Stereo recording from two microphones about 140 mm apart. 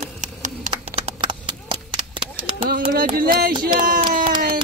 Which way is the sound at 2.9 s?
90° right.